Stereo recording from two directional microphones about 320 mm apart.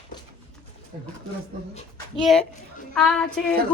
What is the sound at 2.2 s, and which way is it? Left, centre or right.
Speech, centre.